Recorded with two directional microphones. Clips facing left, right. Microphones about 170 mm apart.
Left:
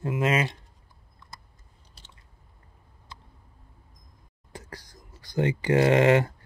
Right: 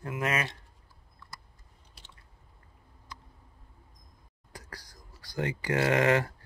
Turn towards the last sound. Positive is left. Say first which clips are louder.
# left 5 dB
turn(degrees=25)  # may be behind; listen again after turning